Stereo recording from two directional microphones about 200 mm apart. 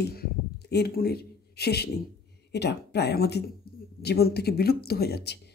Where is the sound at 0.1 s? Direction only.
55° left (ahead or behind).